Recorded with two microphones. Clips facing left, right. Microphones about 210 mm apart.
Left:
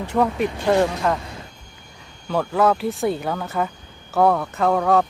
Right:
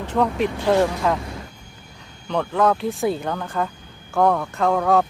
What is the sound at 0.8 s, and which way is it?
Speech, centre (ahead or behind).